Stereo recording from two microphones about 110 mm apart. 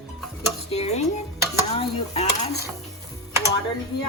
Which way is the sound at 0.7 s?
80° left.